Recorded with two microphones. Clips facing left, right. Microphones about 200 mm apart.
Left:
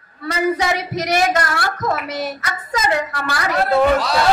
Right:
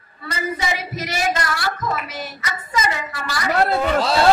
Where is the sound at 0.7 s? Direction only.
55° left (ahead or behind).